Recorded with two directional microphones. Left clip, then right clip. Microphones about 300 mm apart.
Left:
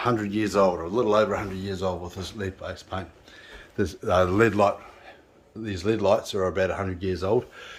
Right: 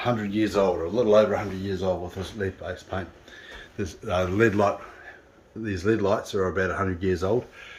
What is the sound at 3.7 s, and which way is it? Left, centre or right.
Speech, centre.